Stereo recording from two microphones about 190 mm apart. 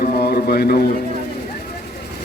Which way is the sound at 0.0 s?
55° left (ahead or behind).